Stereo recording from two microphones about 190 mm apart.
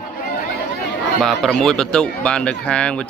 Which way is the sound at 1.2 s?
Centre (ahead or behind).